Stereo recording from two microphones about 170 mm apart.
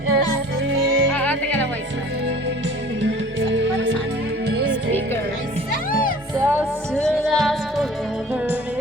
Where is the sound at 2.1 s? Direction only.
90° right.